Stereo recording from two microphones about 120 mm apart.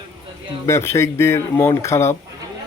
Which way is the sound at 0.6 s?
25° left (ahead or behind).